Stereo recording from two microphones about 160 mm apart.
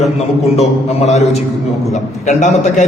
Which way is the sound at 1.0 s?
45° left (ahead or behind).